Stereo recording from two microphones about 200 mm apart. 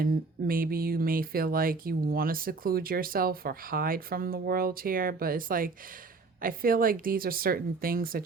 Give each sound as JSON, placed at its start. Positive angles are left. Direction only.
{"t": 0.0, "sound": "speech", "side_deg": -45}